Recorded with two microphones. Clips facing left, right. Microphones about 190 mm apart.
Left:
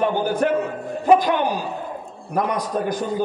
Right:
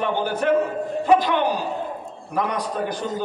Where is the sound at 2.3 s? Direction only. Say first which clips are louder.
Left 2 dB; 45° left (ahead or behind).